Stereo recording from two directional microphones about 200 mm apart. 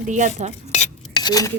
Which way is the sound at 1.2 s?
20° left (ahead or behind).